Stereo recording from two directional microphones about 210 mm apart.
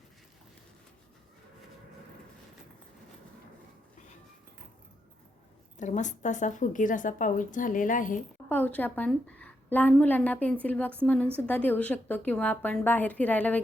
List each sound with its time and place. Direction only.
5.8 s a woman's voice: 35° left (ahead or behind)
8.4 s a woman's voice: 10° left (ahead or behind)